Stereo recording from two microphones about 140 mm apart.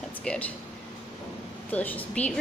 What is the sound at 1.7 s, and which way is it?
Speech, 10° left (ahead or behind).